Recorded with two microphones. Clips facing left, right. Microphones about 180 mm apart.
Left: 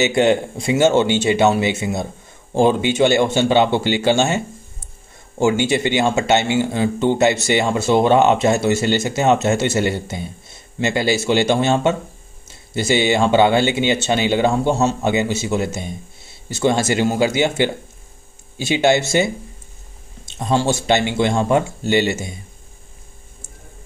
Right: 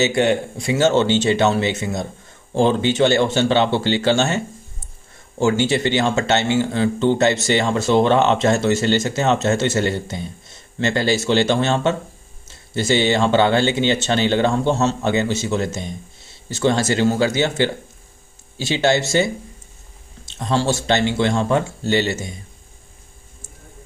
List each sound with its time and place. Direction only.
0.0 s speech: 20° left (ahead or behind)
5.4 s speech: 15° left (ahead or behind)